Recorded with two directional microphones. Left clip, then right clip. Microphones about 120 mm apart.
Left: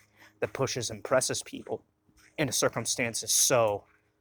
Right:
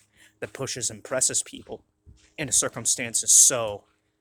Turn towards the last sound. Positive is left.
turn(degrees=-20)  # may be behind; listen again after turning